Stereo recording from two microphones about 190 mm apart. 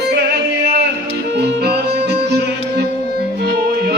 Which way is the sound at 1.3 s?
60° right (ahead or behind).